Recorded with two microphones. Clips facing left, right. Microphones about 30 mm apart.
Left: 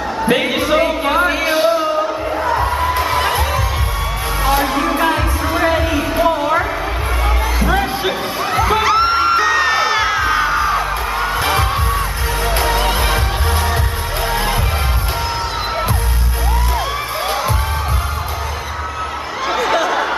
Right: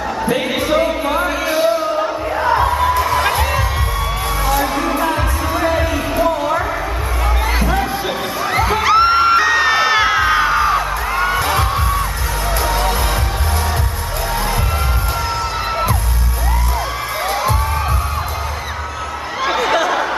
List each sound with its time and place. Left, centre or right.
0.6 s a sound: centre
2.3 s music: centre
2.9 s music: left
4.9 s music: left
5.9 s a sound: centre
8.8 s music: centre
11.3 s heart sounds: centre
12.7 s music: left
19.4 s a sound: centre